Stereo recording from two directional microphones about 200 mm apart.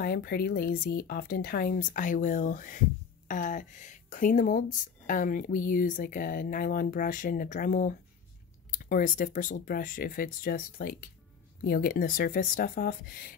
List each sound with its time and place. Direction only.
0.0 s speech: 50° left (ahead or behind)